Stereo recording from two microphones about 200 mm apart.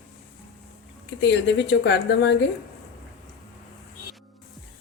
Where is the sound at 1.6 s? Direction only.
60° left (ahead or behind).